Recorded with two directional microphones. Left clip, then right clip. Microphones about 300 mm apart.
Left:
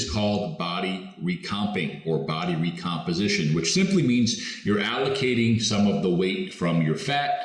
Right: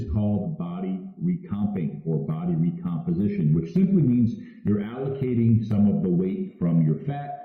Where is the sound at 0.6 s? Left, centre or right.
Centre.